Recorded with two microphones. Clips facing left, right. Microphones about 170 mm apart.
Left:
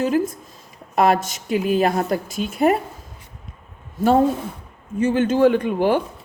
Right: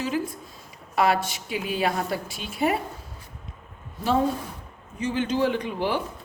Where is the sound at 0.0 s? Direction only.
50° left (ahead or behind).